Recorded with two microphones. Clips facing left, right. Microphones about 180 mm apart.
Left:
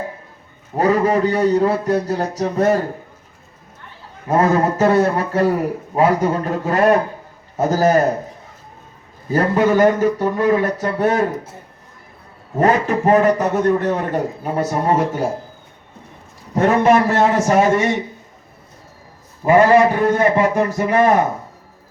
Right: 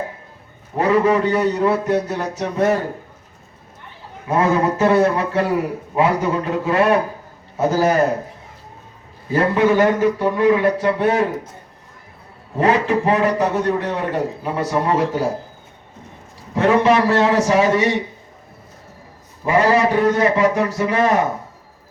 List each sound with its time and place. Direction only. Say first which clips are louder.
0.8 s a man's voice: even; 40° left (ahead or behind)
4.3 s a man's voice: left 1 dB; 40° left (ahead or behind)
9.3 s a man's voice: even; 40° left (ahead or behind)
12.5 s a man's voice: left 1 dB; 45° left (ahead or behind)
16.6 s a man's voice: left 1 dB; 45° left (ahead or behind)
19.5 s a man's voice: left 4 dB; 50° left (ahead or behind)